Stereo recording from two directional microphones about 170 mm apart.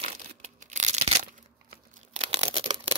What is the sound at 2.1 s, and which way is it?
Tearing, 40° right (ahead or behind).